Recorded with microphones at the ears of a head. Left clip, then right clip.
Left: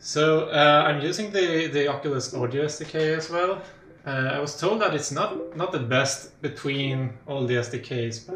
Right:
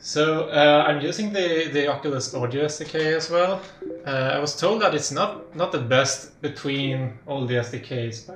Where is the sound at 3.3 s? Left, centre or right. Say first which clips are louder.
Right 4 dB; right.